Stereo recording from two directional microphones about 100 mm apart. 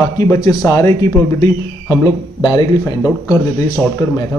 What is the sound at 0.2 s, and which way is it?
Speech, 35° left (ahead or behind).